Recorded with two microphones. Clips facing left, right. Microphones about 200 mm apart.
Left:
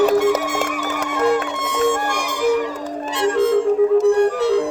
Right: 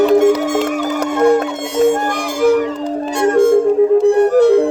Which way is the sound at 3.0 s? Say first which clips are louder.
Right 5 dB; 45° right (ahead or behind).